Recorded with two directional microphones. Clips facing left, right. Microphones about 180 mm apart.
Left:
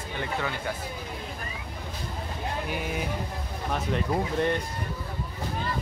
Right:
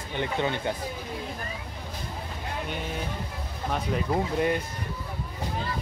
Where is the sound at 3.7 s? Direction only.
5° right (ahead or behind).